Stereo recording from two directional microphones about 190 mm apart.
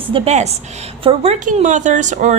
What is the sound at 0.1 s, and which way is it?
A woman's voice, 35° right (ahead or behind).